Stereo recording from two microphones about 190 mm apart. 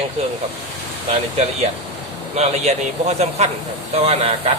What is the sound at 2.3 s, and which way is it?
A man's voice, 35° right (ahead or behind).